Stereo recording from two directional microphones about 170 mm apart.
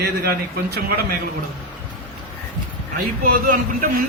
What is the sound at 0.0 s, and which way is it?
Speech, 65° right (ahead or behind).